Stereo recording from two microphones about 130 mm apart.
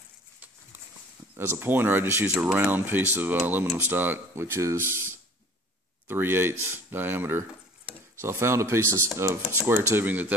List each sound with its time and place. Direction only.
1.3 s speech: 15° right (ahead or behind)